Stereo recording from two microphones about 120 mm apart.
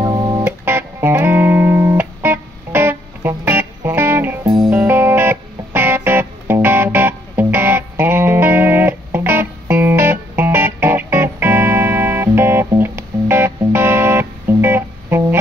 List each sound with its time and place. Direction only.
0.1 s music: 30° right (ahead or behind)
0.5 s music: 20° right (ahead or behind)